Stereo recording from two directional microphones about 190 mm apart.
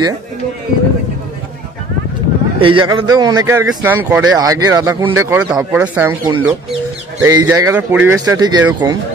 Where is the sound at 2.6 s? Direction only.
25° right (ahead or behind).